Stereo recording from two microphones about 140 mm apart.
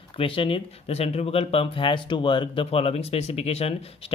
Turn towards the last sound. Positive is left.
turn(degrees=45)  # may be behind; listen again after turning